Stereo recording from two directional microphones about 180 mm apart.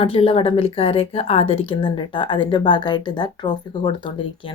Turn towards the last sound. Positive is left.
turn(degrees=25)  # may be behind; listen again after turning